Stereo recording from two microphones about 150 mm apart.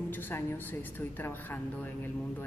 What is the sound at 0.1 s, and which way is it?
A woman's voice, 15° left (ahead or behind).